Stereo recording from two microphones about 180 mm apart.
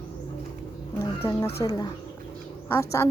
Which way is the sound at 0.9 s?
15° left (ahead or behind).